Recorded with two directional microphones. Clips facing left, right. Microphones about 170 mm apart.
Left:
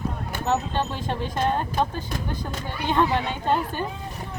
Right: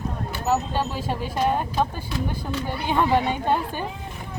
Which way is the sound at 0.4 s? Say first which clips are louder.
Right 1 dB; 5° right (ahead or behind).